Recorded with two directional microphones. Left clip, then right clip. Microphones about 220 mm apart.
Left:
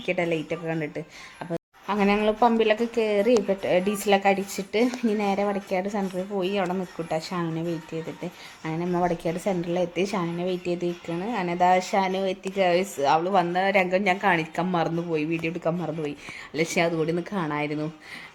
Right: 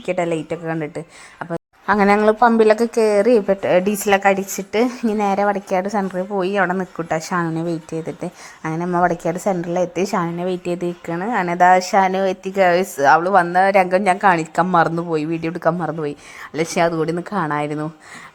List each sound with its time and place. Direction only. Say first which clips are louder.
0.0 s a woman's voice: right 5 dB; 15° right (ahead or behind)
1.9 s a woman's voice: right 9 dB; 30° right (ahead or behind)
2.7 s a woman's voice: right 8 dB; 10° right (ahead or behind)
8.6 s a woman's voice: right 8 dB; 15° right (ahead or behind)